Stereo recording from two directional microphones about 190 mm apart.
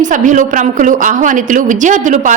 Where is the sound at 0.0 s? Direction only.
40° right (ahead or behind).